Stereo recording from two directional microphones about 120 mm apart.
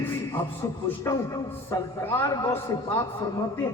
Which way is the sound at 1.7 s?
25° left (ahead or behind).